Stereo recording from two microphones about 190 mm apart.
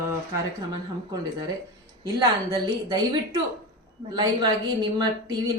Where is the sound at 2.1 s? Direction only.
20° right (ahead or behind).